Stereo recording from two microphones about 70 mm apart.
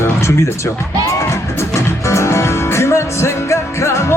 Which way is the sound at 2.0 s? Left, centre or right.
Left.